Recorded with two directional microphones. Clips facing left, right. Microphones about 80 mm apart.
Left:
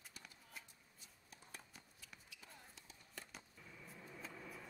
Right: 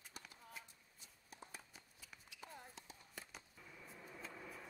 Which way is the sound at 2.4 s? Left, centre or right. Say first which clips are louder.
Right 6 dB; right.